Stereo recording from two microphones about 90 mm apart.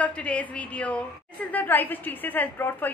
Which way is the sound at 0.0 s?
15° left (ahead or behind).